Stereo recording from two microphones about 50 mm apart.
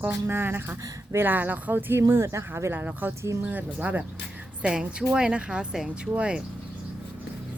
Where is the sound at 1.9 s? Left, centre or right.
Right.